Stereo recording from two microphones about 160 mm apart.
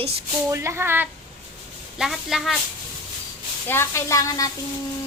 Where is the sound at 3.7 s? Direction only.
15° left (ahead or behind).